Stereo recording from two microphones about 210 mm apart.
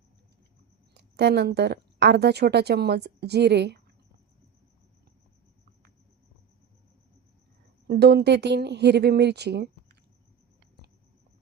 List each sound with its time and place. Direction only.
0.9 s speech: 55° right (ahead or behind)
7.9 s speech: 50° right (ahead or behind)